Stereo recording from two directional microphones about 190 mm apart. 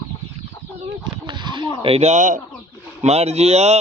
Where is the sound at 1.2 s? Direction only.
25° right (ahead or behind).